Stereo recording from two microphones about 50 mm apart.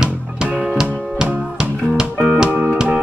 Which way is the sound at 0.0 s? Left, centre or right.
Centre.